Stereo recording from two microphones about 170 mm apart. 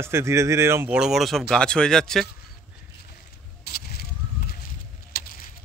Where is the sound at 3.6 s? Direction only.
65° left (ahead or behind).